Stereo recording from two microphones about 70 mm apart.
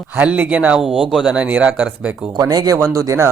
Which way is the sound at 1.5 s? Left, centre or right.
Right.